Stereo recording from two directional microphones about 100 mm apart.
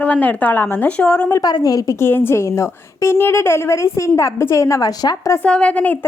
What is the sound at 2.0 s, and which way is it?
A woman's voice, 20° left (ahead or behind).